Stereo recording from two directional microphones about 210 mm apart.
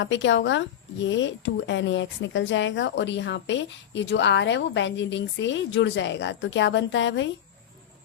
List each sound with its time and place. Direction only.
0.0 s a woman's voice: 60° left (ahead or behind)